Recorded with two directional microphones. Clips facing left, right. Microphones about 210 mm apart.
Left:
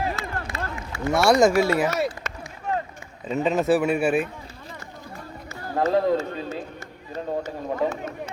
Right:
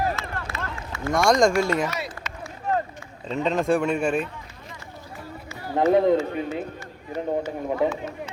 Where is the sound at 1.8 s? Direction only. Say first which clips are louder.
Left 6 dB; 45° left (ahead or behind).